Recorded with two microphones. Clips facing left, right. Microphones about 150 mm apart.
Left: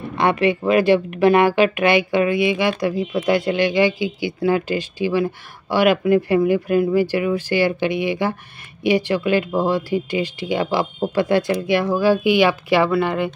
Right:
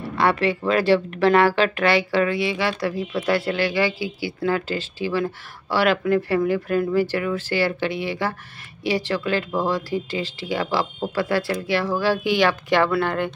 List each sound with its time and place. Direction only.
0.2 s speech: 15° left (ahead or behind)